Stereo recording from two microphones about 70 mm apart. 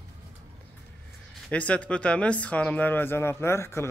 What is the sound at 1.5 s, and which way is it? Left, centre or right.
Speech, centre.